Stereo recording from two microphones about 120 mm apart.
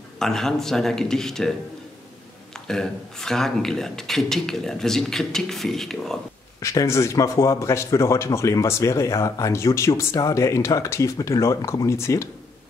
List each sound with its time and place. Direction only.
0.2 s speech: 5° left (ahead or behind)
2.5 s speech: 5° left (ahead or behind)
6.6 s speech: 25° left (ahead or behind)